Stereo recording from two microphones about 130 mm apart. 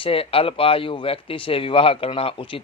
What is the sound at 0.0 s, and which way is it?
Speech, 45° left (ahead or behind).